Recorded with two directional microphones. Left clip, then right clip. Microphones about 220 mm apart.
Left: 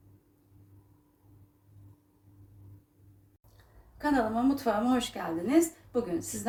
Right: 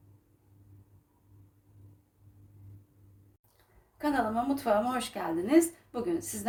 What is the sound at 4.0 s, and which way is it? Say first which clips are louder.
A woman's voice: left 1 dB; 45° right (ahead or behind).